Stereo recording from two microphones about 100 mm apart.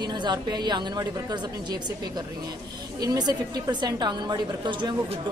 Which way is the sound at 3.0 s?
40° right (ahead or behind).